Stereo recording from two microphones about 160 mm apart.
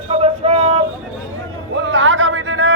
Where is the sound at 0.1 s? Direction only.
40° right (ahead or behind).